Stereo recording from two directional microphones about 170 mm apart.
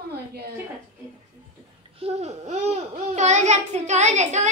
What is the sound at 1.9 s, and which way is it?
Babbling, 40° right (ahead or behind).